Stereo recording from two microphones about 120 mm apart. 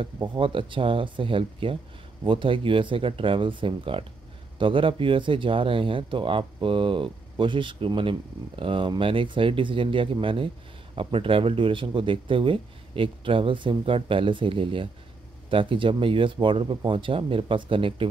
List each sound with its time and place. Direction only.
0.0 s speech: 45° right (ahead or behind)